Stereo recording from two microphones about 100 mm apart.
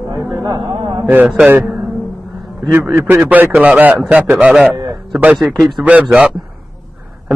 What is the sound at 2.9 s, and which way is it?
A man's voice, 25° right (ahead or behind).